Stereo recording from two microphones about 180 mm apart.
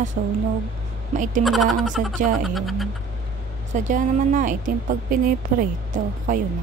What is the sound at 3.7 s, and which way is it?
Speech, 45° right (ahead or behind).